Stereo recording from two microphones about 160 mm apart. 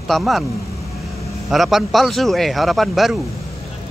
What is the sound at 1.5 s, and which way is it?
Speech, centre (ahead or behind).